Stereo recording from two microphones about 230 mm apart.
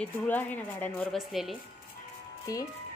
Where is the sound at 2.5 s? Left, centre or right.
Centre.